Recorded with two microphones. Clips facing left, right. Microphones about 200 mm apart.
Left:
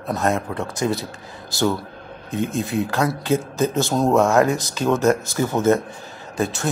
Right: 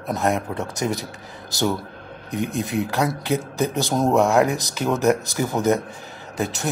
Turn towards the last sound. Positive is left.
turn(degrees=-20)  # may be behind; listen again after turning